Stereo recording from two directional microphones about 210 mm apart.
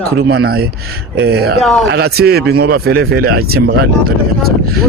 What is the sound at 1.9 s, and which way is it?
Speech, 50° right (ahead or behind).